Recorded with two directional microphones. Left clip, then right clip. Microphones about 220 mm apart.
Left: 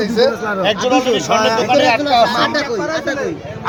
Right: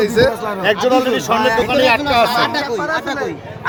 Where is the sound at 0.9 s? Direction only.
40° right (ahead or behind).